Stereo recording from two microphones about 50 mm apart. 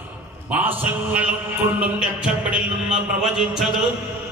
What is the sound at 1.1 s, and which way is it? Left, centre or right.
Speech, right.